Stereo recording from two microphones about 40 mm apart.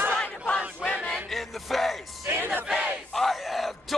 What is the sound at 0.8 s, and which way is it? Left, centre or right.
Chant, centre.